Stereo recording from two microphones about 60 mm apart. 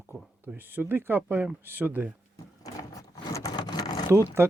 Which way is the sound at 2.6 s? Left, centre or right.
Left.